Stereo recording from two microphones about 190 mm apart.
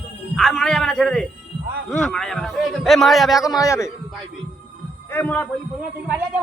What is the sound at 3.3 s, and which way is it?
Speech, 20° left (ahead or behind).